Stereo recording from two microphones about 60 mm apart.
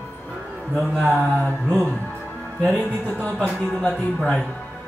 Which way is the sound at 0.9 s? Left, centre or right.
Left.